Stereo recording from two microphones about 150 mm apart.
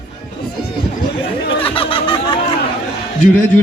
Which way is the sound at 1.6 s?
35° left (ahead or behind).